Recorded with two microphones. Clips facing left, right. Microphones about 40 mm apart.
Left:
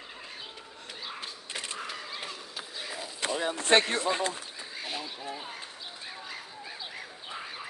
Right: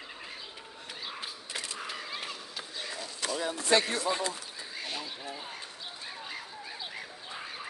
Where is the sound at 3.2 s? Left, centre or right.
Left.